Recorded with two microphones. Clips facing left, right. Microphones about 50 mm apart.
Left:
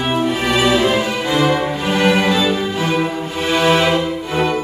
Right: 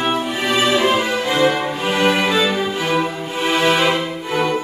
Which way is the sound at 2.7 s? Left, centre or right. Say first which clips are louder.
Left 1 dB; centre.